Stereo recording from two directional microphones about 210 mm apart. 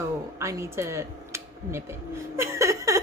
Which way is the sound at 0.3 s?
15° right (ahead or behind).